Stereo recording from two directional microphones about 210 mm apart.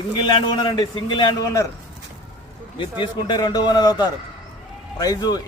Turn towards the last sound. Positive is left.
turn(degrees=20)  # may be behind; listen again after turning